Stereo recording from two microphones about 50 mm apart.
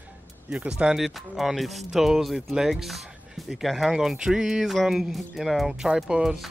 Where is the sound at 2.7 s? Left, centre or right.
Centre.